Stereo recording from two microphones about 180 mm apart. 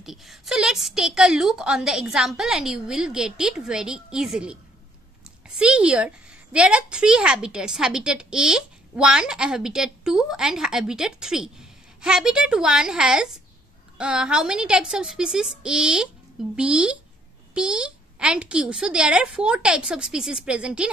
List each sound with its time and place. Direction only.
0.0 s a woman's voice: centre (ahead or behind)
5.6 s a woman's voice: 5° right (ahead or behind)